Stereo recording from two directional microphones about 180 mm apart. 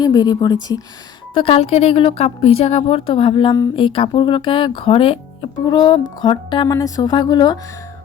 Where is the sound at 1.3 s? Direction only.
30° left (ahead or behind).